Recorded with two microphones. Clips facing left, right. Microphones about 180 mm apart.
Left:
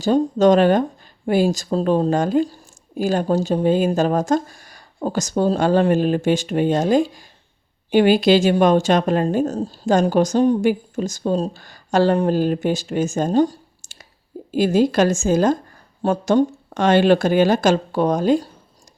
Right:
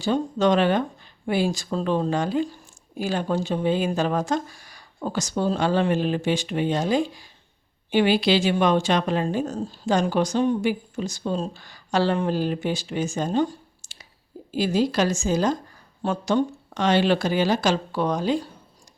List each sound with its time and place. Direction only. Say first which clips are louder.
0.0 s a woman's voice: left 6 dB; 40° left (ahead or behind)